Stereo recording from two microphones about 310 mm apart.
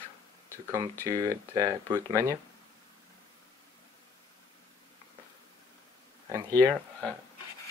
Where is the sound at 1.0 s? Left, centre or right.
Centre.